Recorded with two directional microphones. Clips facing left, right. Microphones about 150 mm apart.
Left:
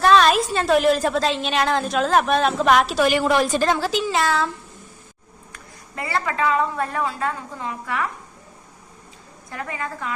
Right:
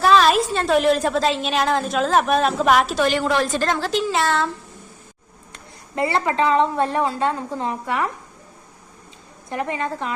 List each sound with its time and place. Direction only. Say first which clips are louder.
0.0 s a woman's voice: even; centre (ahead or behind)
6.0 s a woman's voice: right 4 dB; 25° right (ahead or behind)
9.5 s a woman's voice: right 5 dB; 20° right (ahead or behind)